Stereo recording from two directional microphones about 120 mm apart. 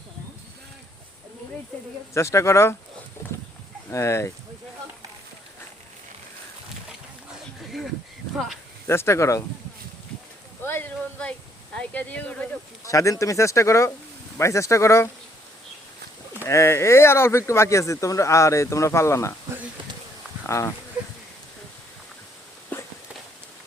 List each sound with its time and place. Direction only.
2.1 s speech: 25° left (ahead or behind)
3.8 s speech: 25° left (ahead or behind)
8.9 s speech: 20° left (ahead or behind)
10.6 s speech: 15° left (ahead or behind)
12.8 s speech: 25° left (ahead or behind)
16.4 s speech: 25° left (ahead or behind)
20.5 s speech: 25° left (ahead or behind)
22.7 s walk: 15° left (ahead or behind)